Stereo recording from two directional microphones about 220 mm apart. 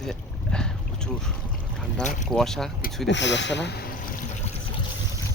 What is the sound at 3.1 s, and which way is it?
Speech, 55° left (ahead or behind).